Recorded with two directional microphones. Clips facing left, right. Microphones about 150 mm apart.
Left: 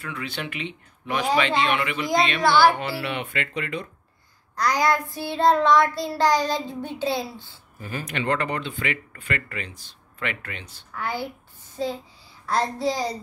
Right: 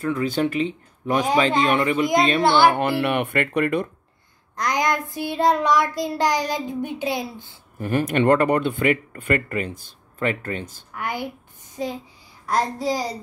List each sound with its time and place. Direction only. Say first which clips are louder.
0.0 s speech: right 11 dB; 45° right (ahead or behind)
2.4 s speech: even; 20° right (ahead or behind)
2.7 s speech: right 7 dB; 55° right (ahead or behind)
4.6 s child singing: left 1 dB; 20° right (ahead or behind)
7.8 s speech: right 10 dB; 55° right (ahead or behind)
11.0 s child singing: right 1 dB; 15° right (ahead or behind)
11.7 s speech: even; 15° right (ahead or behind)
12.4 s child singing: right 1 dB; 15° right (ahead or behind)